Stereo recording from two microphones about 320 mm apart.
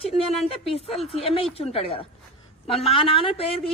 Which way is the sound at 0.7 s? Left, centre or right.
Centre.